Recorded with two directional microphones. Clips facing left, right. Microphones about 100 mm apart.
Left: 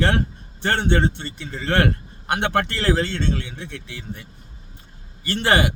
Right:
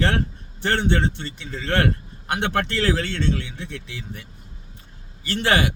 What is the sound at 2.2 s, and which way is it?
A man's voice, 25° left (ahead or behind).